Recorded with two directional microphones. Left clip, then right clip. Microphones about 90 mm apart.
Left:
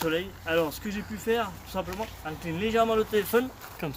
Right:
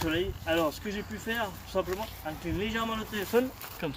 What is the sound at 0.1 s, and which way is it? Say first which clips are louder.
Speech: left 2 dB; 40° left (ahead or behind).